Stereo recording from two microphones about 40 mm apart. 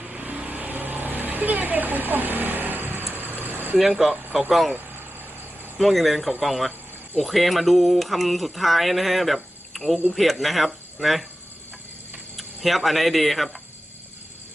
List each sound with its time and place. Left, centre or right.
0.0 s vehicle: right
0.4 s vehicle: right
3.8 s speech: centre
5.7 s speech: centre
12.4 s speech: centre